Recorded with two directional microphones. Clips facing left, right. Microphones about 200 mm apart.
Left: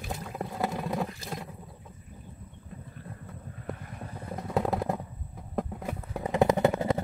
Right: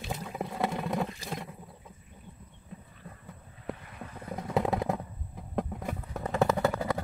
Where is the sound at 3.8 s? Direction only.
45° left (ahead or behind).